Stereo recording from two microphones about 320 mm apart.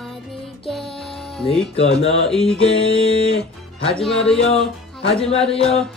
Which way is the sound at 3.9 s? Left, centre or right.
Centre.